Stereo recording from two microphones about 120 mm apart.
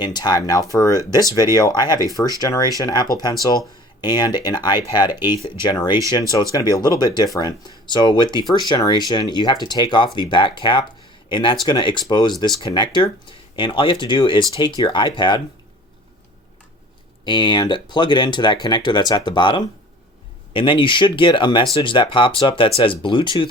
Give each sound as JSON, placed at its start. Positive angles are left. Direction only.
{"t": 0.0, "sound": "speech", "side_deg": 35}
{"t": 17.2, "sound": "speech", "side_deg": 40}